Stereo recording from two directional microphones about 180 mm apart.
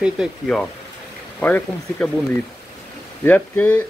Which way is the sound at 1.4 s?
10° left (ahead or behind).